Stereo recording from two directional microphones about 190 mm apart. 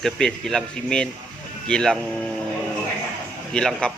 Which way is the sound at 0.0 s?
Centre (ahead or behind).